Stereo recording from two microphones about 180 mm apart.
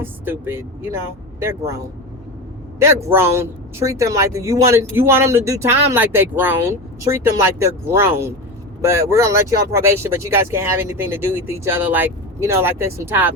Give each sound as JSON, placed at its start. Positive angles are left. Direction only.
{"t": 0.0, "sound": "speech", "side_deg": -10}